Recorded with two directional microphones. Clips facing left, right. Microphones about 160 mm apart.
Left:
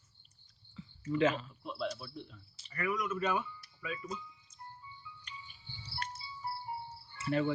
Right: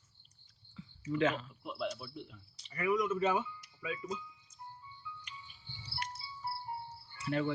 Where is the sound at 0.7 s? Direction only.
5° left (ahead or behind).